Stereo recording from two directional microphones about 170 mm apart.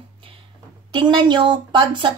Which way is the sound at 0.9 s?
25° right (ahead or behind).